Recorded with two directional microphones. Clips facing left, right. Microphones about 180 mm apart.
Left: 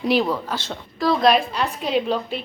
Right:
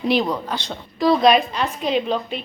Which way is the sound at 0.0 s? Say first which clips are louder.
Even; 5° left (ahead or behind).